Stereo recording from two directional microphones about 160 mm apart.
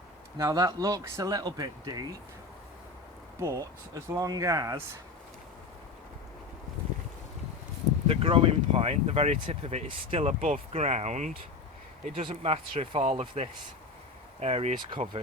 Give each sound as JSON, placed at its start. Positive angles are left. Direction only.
{"t": 0.3, "sound": "speech", "side_deg": -25}
{"t": 3.4, "sound": "speech", "side_deg": -20}
{"t": 8.0, "sound": "speech", "side_deg": -35}
{"t": 12.1, "sound": "speech", "side_deg": -35}